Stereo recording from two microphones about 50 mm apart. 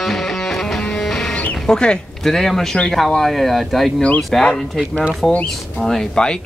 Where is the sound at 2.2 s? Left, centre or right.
Centre.